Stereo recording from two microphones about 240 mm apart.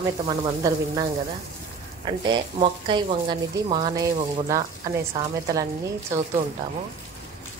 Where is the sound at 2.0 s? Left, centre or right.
Centre.